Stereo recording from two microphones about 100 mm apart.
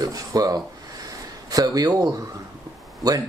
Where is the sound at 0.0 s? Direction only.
35° right (ahead or behind).